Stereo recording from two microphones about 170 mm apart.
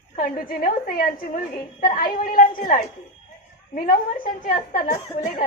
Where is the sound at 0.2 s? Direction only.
55° left (ahead or behind).